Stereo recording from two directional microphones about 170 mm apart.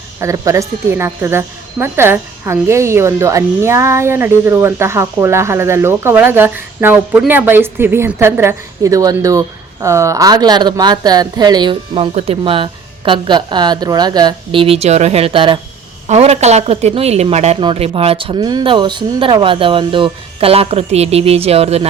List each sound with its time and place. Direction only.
0.2 s a woman's voice: 20° right (ahead or behind); by 21.8 s 35° right (ahead or behind)